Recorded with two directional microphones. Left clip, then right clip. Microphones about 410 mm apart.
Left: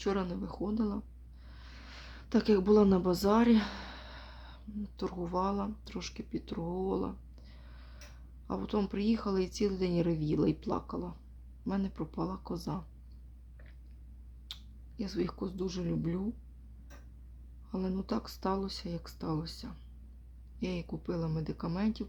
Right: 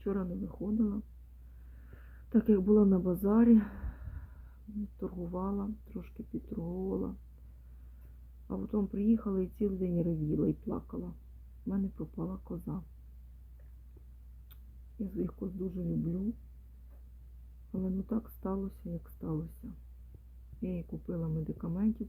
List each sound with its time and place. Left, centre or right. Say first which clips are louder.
0.0 s speech: left 3 dB; centre
8.4 s speech: left 2 dB; centre
14.5 s speech: left 9 dB; centre
17.7 s speech: left 2 dB; centre